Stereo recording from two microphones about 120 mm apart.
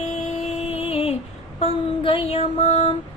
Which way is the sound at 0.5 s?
55° left (ahead or behind).